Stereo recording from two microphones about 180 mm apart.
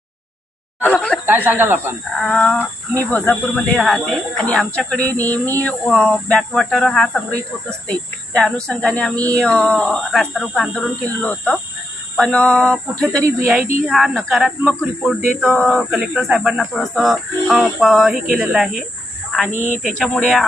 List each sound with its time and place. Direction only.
0.8 s a sound: 5° left (ahead or behind)
1.5 s speech: 10° right (ahead or behind)
2.2 s speech: 5° left (ahead or behind)
8.4 s speech: 5° left (ahead or behind)
19.5 s speech: 40° left (ahead or behind)
19.8 s speech: 5° left (ahead or behind)